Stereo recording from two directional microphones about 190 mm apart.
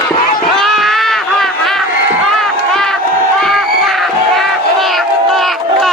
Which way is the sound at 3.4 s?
Centre (ahead or behind).